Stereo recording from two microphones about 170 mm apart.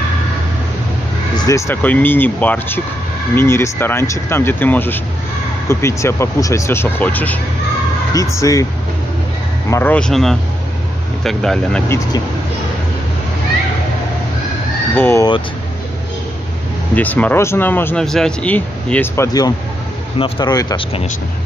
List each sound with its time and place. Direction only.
1.3 s speech: 20° left (ahead or behind)
9.7 s speech: 10° left (ahead or behind)
15.0 s speech: 15° left (ahead or behind)
16.9 s speech: 10° left (ahead or behind)